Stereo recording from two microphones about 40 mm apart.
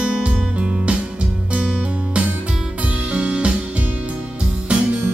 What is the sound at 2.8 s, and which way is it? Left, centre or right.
Music, right.